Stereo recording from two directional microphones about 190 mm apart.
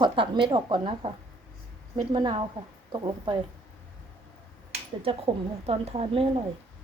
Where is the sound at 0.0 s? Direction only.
25° right (ahead or behind).